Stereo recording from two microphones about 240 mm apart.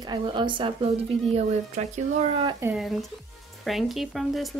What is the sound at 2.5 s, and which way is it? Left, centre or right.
Speech, centre.